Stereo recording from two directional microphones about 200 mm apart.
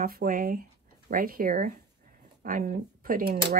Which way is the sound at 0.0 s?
45° right (ahead or behind).